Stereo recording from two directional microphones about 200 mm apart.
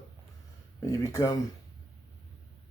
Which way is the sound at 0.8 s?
15° left (ahead or behind).